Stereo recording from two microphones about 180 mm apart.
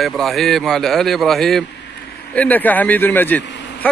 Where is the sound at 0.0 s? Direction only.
Centre (ahead or behind).